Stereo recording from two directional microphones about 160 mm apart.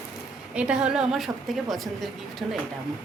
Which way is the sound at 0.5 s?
5° right (ahead or behind).